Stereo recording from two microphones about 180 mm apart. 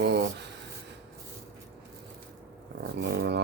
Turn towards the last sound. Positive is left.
turn(degrees=-70)  # may be behind; listen again after turning